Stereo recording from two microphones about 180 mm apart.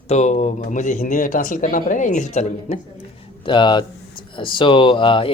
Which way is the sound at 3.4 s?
25° left (ahead or behind).